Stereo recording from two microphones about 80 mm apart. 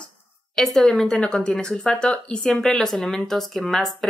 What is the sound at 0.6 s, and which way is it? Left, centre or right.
Speech, centre.